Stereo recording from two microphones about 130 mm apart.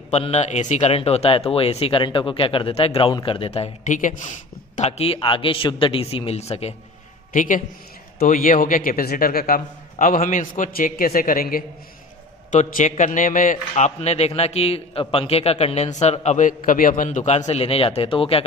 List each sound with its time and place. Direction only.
0.1 s speech: 55° left (ahead or behind)
3.8 s speech: 80° left
4.7 s speech: 55° left (ahead or behind)
7.3 s a man's voice: 90° left
9.9 s a man's voice: 90° left
12.4 s a man's voice: 70° left (ahead or behind); by 18.4 s 45° left (ahead or behind)